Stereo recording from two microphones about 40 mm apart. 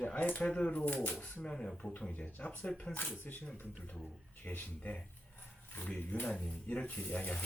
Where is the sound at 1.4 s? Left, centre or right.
Left.